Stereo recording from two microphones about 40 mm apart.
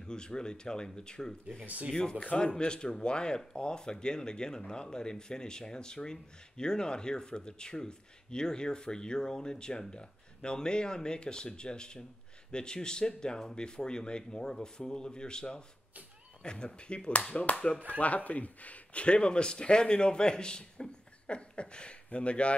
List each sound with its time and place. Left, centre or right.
0.0 s speech: left